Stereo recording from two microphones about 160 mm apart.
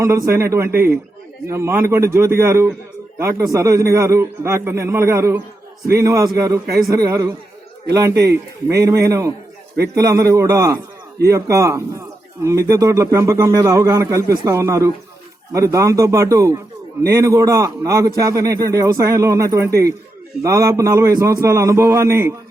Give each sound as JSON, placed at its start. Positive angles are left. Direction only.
{"t": 0.0, "sound": "a man's voice", "side_deg": -20}
{"t": 8.1, "sound": "a man's voice", "side_deg": -90}
{"t": 8.7, "sound": "a man's voice", "side_deg": -20}